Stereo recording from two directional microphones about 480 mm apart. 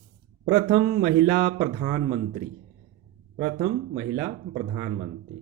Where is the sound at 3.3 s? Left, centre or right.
Centre.